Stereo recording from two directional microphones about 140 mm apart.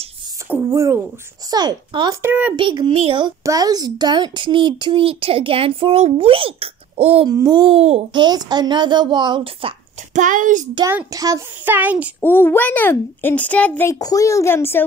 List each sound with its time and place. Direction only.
0.5 s speech: 20° right (ahead or behind)
2.2 s speech: 10° right (ahead or behind)
2.5 s speech: 35° right (ahead or behind)
3.4 s speech: 25° right (ahead or behind); by 7.2 s 45° right (ahead or behind)
7.2 s speech: 30° right (ahead or behind); by 8.0 s 45° right (ahead or behind)
8.1 s speech: 30° right (ahead or behind)
10.1 s a child's voice: 65° right (ahead or behind)
11.1 s speech: 25° right (ahead or behind)
12.2 s a child's voice: 15° left (ahead or behind)
13.8 s a woman's voice: 25° left (ahead or behind)